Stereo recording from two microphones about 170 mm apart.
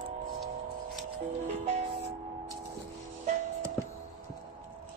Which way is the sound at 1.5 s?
40° right (ahead or behind).